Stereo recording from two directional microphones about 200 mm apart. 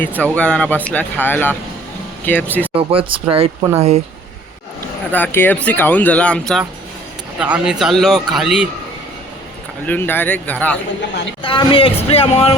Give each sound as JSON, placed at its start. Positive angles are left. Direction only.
{"t": 0.3, "sound": "a man's voice", "side_deg": 5}
{"t": 2.7, "sound": "speech", "side_deg": -25}
{"t": 5.1, "sound": "a man's voice", "side_deg": 10}
{"t": 9.8, "sound": "speech", "side_deg": 10}
{"t": 11.4, "sound": "speech", "side_deg": 25}